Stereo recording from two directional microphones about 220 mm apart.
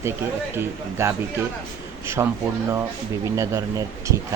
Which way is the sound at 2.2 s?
15° right (ahead or behind).